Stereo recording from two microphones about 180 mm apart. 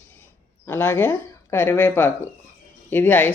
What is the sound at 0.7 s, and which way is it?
Speech, 10° left (ahead or behind).